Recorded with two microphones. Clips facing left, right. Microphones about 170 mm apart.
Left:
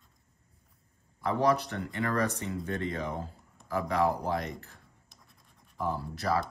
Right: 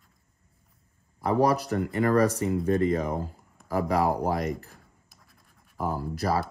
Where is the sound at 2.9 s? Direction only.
40° right (ahead or behind).